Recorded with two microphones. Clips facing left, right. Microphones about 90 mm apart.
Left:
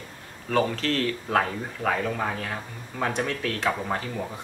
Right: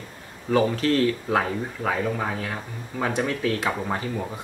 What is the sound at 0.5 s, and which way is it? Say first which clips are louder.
Speech: right 4 dB; 10° right (ahead or behind).